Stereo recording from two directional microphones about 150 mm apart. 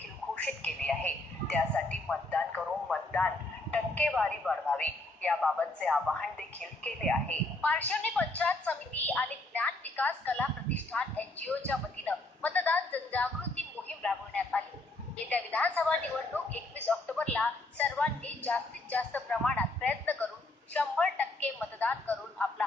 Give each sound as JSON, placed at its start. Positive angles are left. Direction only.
{"t": 0.4, "sound": "telephone", "side_deg": 10}
{"t": 3.7, "sound": "a man's voice", "side_deg": 10}
{"t": 13.8, "sound": "a sound", "side_deg": 10}
{"t": 15.2, "sound": "a man's voice", "side_deg": 10}